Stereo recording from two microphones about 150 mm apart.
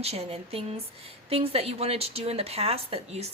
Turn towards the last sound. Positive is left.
turn(degrees=-40)  # may be behind; listen again after turning